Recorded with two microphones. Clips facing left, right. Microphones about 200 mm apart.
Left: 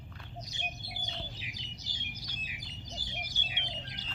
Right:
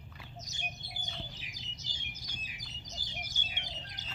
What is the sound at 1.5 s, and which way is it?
Bird, 45° right (ahead or behind).